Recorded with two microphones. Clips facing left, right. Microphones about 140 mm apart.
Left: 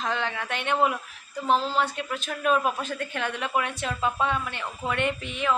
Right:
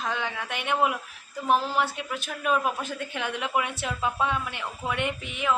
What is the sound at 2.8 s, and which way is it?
A woman's voice, 15° right (ahead or behind).